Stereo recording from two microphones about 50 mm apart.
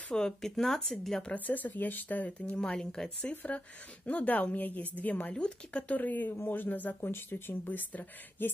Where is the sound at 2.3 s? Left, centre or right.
Left.